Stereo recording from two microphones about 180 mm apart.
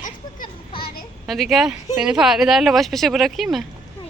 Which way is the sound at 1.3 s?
Centre (ahead or behind).